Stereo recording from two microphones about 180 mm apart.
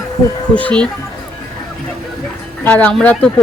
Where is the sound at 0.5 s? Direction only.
5° left (ahead or behind).